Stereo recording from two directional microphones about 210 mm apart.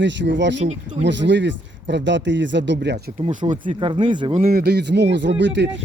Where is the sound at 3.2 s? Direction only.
35° right (ahead or behind).